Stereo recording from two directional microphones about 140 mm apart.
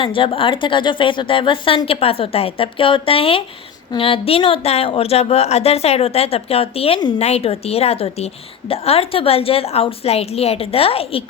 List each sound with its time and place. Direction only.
0.0 s a woman's voice: 40° left (ahead or behind)